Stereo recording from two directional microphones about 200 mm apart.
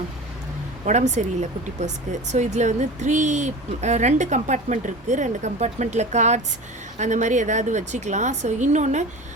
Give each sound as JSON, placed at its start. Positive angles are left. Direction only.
{"t": 0.9, "sound": "speech", "side_deg": -35}